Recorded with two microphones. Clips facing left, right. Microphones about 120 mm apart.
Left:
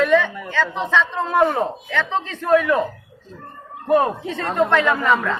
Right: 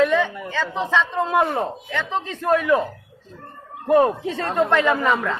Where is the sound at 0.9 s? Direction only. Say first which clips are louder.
Left 2 dB; 10° right (ahead or behind).